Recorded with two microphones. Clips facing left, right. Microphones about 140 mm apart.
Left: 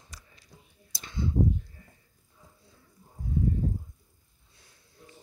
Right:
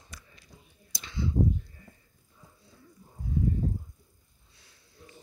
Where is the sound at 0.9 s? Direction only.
45° left (ahead or behind).